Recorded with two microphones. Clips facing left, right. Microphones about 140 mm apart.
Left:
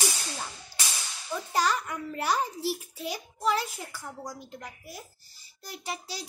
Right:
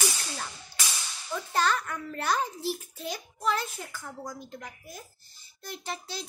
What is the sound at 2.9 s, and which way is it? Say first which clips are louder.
A child's voice: left 1 dB; 10° left (ahead or behind).